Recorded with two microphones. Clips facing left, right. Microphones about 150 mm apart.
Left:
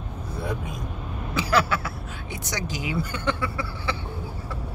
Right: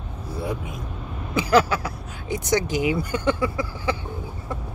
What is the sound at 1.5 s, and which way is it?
Vehicle, 40° right (ahead or behind).